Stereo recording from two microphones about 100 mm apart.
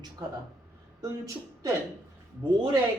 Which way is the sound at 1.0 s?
30° right (ahead or behind).